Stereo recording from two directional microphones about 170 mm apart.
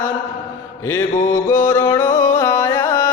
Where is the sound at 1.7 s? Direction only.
20° left (ahead or behind).